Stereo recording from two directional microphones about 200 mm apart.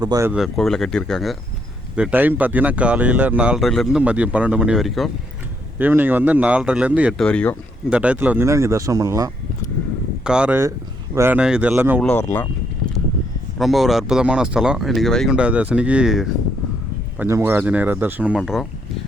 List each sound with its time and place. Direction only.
0.0 s speech: 15° right (ahead or behind)
0.3 s speech: centre (ahead or behind)
7.9 s speech: 5° right (ahead or behind)
10.2 s speech: 5° right (ahead or behind)
12.0 s speech: 10° left (ahead or behind)
13.6 s speech: centre (ahead or behind)